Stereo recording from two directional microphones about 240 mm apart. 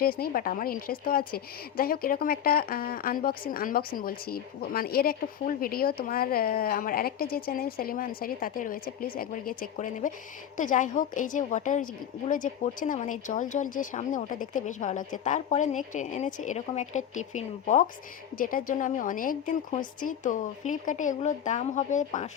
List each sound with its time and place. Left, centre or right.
0.0 s speech: left